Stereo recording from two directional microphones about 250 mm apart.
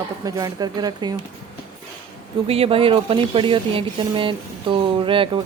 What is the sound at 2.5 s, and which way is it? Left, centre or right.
Speech, right.